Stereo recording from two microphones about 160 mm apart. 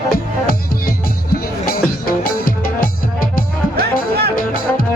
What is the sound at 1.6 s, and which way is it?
Music, 65° left (ahead or behind).